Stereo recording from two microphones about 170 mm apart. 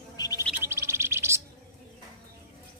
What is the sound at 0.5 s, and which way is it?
Bird, 15° right (ahead or behind).